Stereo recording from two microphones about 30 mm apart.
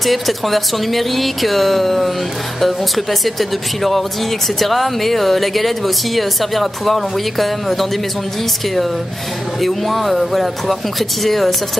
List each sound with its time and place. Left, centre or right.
0.0 s speech: centre
9.6 s speech: centre